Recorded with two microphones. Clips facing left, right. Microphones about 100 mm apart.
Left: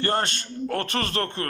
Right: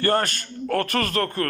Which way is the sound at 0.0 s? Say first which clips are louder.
Right 3 dB; 25° left (ahead or behind).